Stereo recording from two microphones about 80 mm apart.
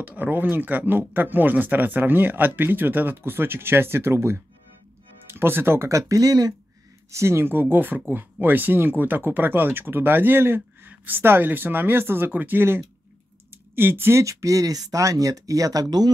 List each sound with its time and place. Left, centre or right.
0.0 s speech: right
7.1 s speech: right